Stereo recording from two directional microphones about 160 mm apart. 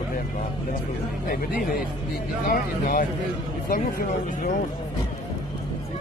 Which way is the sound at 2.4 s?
60° left (ahead or behind).